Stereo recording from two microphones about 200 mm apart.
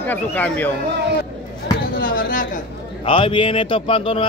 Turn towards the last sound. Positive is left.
turn(degrees=25)  # may be behind; listen again after turning